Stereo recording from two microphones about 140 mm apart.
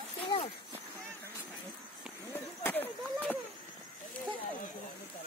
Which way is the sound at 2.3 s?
15° left (ahead or behind).